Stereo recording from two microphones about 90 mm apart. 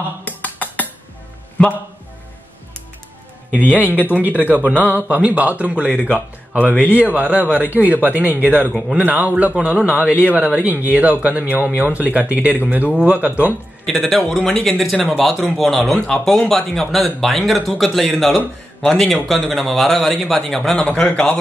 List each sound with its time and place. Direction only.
0.2 s a sound: 20° left (ahead or behind)
3.5 s a man's voice: 15° right (ahead or behind)
13.8 s a man's voice: 5° left (ahead or behind)